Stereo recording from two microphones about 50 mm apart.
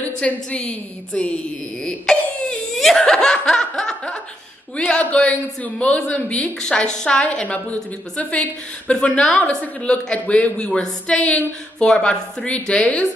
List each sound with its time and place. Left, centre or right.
0.2 s speech: left
2.1 s speech: centre; by 8.9 s left
8.9 s speech: centre